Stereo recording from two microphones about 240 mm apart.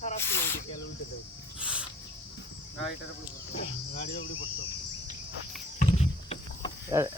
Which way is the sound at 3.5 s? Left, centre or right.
Left.